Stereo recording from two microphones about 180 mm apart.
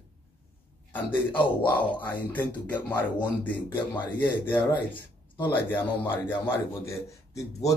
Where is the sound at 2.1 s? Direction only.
10° left (ahead or behind).